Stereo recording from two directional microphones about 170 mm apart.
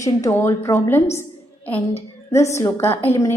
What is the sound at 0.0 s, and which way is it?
A woman's voice, 15° left (ahead or behind).